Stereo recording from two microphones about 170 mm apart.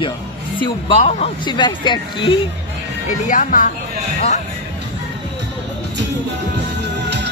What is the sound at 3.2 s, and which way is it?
Speech, 50° left (ahead or behind).